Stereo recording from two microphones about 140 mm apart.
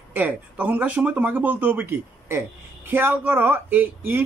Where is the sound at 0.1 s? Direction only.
10° right (ahead or behind).